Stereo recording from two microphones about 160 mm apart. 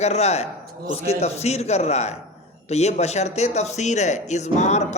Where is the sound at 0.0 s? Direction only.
40° left (ahead or behind).